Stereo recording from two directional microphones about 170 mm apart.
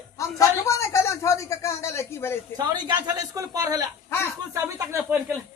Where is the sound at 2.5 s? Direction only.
25° right (ahead or behind).